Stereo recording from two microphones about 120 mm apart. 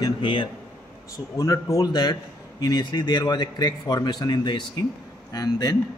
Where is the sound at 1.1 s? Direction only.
30° left (ahead or behind).